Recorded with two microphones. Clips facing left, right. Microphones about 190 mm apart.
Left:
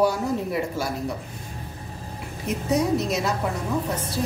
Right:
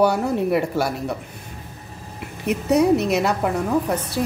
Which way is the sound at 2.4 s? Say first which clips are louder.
Right 6 dB; 65° right (ahead or behind).